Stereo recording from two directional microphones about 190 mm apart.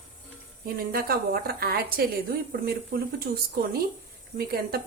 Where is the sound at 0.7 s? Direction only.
55° right (ahead or behind).